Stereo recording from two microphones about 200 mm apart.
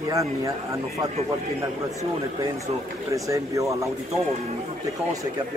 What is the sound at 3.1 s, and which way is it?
Speech, 15° right (ahead or behind).